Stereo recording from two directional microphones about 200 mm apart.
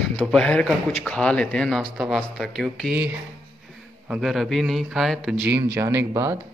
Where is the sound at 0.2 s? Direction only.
5° left (ahead or behind).